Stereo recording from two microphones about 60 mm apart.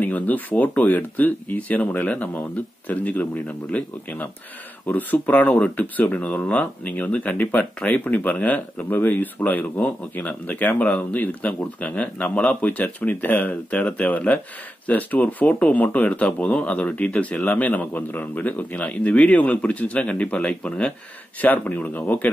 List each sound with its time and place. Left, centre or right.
0.0 s speech: left